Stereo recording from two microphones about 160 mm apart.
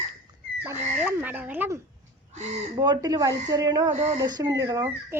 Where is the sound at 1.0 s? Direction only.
10° right (ahead or behind).